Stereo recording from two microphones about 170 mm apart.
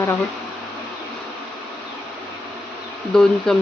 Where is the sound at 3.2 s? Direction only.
Centre (ahead or behind).